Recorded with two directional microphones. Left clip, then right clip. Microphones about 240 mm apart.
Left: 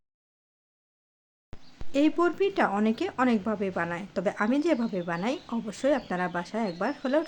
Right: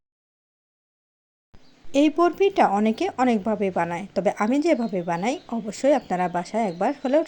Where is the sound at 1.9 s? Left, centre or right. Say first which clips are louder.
Right 5 dB; centre.